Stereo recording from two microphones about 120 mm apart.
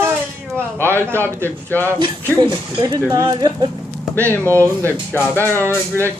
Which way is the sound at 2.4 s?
35° right (ahead or behind).